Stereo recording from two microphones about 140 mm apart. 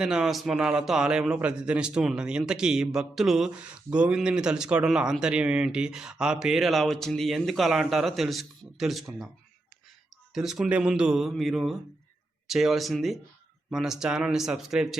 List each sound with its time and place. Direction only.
0.0 s a man's voice: 5° right (ahead or behind)
10.3 s a man's voice: 5° right (ahead or behind)